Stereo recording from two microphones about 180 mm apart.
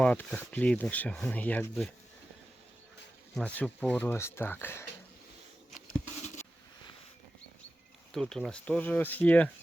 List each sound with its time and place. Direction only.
0.0 s speech: 5° left (ahead or behind)
3.3 s speech: 5° left (ahead or behind)
6.2 s a sound: 40° left (ahead or behind)
8.1 s speech: centre (ahead or behind)